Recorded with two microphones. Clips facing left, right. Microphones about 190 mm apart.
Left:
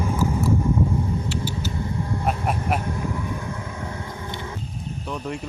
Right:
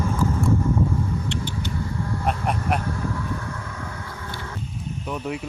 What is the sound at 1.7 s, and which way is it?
Vehicle, 20° left (ahead or behind).